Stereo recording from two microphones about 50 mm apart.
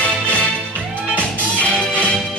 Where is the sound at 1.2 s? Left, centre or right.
Left.